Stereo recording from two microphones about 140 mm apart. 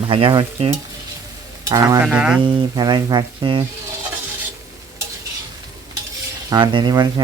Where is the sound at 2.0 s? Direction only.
10° right (ahead or behind).